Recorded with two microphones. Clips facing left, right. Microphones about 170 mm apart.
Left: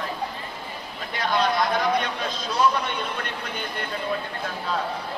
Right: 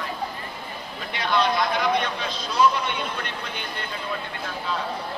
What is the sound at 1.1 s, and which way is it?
Speech, 45° left (ahead or behind).